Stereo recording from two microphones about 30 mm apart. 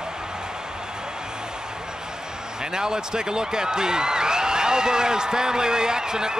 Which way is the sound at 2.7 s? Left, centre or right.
Right.